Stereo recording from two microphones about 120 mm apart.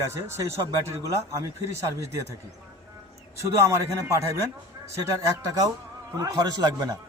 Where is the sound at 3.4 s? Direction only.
25° right (ahead or behind).